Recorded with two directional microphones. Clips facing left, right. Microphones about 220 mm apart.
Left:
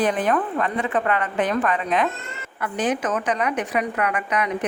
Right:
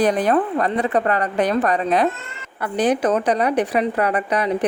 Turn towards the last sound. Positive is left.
turn(degrees=-35)  # may be behind; listen again after turning